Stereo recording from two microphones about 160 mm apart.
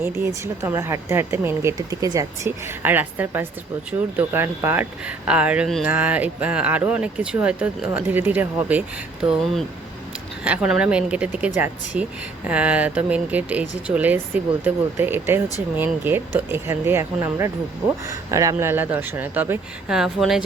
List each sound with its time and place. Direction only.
0.0 s speech: 15° right (ahead or behind)
9.2 s speech: centre (ahead or behind)